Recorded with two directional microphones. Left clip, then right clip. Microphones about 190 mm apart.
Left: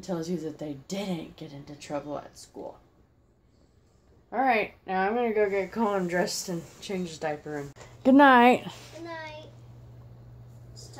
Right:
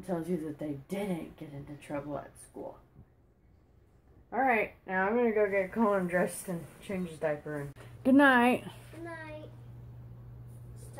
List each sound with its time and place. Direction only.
0.0 s a woman's voice: centre (ahead or behind)
4.3 s speech: 10° left (ahead or behind)
8.0 s a woman's voice: 20° left (ahead or behind)